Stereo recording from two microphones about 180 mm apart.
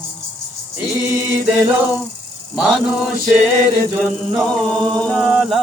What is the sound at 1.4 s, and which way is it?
Chant, 5° right (ahead or behind).